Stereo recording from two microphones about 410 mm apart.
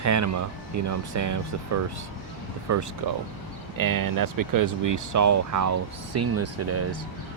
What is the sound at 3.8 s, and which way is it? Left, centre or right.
Speech, right.